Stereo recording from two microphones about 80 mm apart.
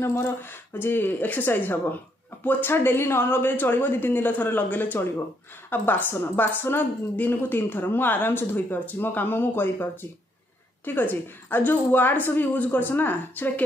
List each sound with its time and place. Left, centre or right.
0.0 s a woman's voice: left
10.9 s a woman's voice: left